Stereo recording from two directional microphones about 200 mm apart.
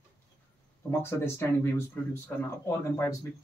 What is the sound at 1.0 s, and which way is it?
Speech, 10° left (ahead or behind).